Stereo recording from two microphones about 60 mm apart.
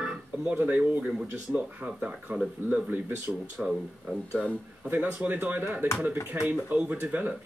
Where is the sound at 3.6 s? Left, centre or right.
Centre.